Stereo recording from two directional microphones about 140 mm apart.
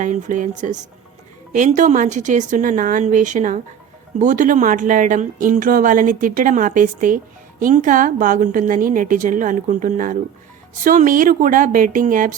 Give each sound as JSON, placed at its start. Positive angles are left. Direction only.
{"t": 0.0, "sound": "a woman's voice", "side_deg": -65}